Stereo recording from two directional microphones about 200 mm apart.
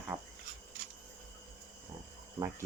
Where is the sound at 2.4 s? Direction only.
15° right (ahead or behind).